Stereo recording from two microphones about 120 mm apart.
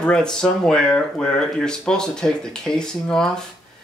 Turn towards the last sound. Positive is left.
turn(degrees=5)  # may be behind; listen again after turning